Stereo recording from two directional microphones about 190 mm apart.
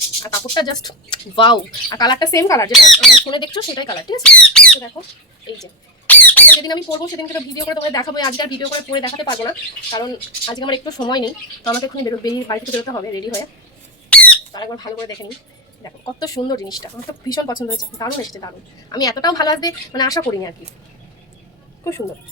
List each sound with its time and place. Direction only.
0.2 s a woman's voice: 20° left (ahead or behind)
4.2 s speech: 5° left (ahead or behind)
6.1 s squawk: 10° left (ahead or behind)
6.6 s a woman's voice: 20° left (ahead or behind)
14.1 s squawk: 5° left (ahead or behind)
14.5 s a woman's voice: 20° left (ahead or behind)